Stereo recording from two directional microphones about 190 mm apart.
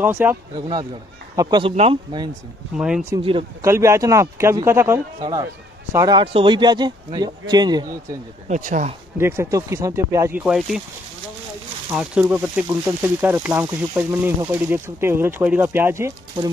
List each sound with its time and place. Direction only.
0.0 s speech: 10° right (ahead or behind)
1.8 s speech: 30° right (ahead or behind)
3.6 s speech: 15° right (ahead or behind)
8.5 s speech: 40° right (ahead or behind)
9.2 s speech: 15° right (ahead or behind)
11.9 s speech: 5° right (ahead or behind)